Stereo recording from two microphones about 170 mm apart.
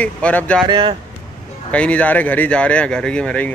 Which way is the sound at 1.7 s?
10° left (ahead or behind).